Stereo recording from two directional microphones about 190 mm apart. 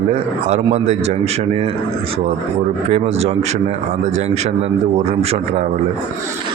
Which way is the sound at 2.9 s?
35° right (ahead or behind).